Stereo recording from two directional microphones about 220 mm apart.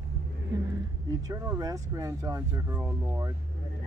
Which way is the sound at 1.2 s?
15° right (ahead or behind).